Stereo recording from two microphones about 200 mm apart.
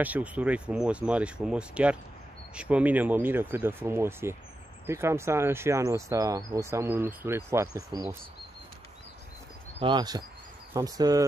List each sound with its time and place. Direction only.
0.0 s speech: 5° right (ahead or behind)
9.8 s speech: 25° right (ahead or behind)